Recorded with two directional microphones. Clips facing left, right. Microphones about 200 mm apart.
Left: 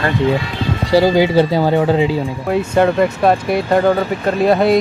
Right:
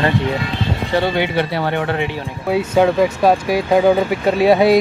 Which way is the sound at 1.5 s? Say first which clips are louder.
Left 6 dB; 15° left (ahead or behind).